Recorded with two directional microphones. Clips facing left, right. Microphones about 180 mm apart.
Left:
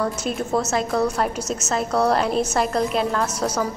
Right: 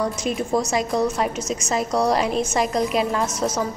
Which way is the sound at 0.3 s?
Centre (ahead or behind).